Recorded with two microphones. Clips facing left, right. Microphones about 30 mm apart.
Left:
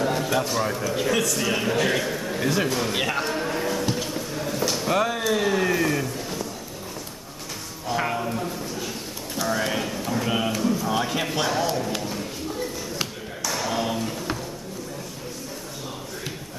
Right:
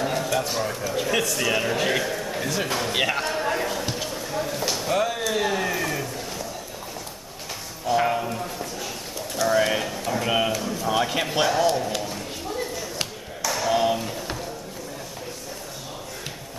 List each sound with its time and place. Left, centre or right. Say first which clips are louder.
0.2 s bird: left 1 dB; centre
0.6 s a man's voice: left 1 dB; centre
1.1 s a man's voice: right 3 dB; centre
3.4 s clip-clop: right 1 dB; centre
3.7 s a sound: left 2 dB; centre
7.8 s a sound: right 3 dB; centre
9.6 s a man's voice: right 3 dB; centre
10.2 s a man's voice: right 3 dB; centre
10.5 s a man's voice: left 3 dB; centre
10.9 s a man's voice: right 1 dB; centre
13.0 s a sound: right 1 dB; centre